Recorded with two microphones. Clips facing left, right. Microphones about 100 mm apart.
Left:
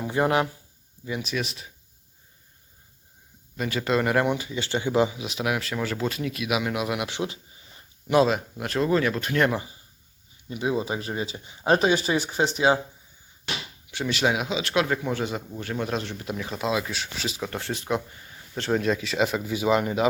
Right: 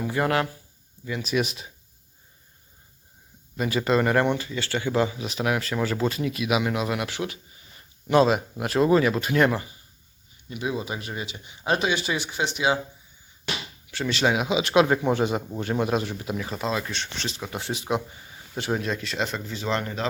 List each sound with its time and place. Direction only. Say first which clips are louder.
0.0 s speech: left 1 dB; 20° left (ahead or behind)
1.0 s a sound: even; 15° left (ahead or behind)
1.4 s speech: right 5 dB; 20° right (ahead or behind)
3.6 s speech: right 2 dB; 5° right (ahead or behind)
4.4 s speech: even; 15° left (ahead or behind)
5.2 s speech: right 2 dB; centre (ahead or behind); by 7.3 s 20° left (ahead or behind)
8.0 s speech: right 1 dB; 5° left (ahead or behind)
8.3 s speech: right 3 dB; 10° right (ahead or behind)
9.6 s speech: even; 25° left (ahead or behind)
13.9 s speech: right 1 dB; 5° left (ahead or behind)
14.5 s speech: right 5 dB; 20° right (ahead or behind)
15.8 s speech: right 3 dB; 5° right (ahead or behind)
17.5 s speech: right 2 dB; 15° right (ahead or behind)
18.8 s speech: left 4 dB; centre (ahead or behind)